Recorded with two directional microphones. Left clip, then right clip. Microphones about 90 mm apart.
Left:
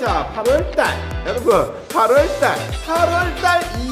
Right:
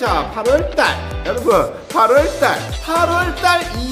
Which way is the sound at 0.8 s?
15° right (ahead or behind).